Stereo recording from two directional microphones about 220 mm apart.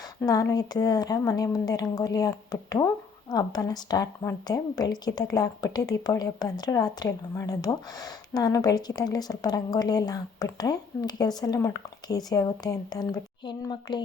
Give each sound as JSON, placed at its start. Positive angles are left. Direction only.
{"t": 0.2, "sound": "a woman's voice", "side_deg": 15}